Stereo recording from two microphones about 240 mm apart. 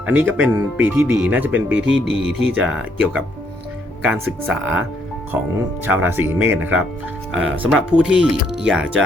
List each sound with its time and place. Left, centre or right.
0.0 s speech: centre
1.7 s speech: right
2.6 s speech: centre
5.8 s speech: centre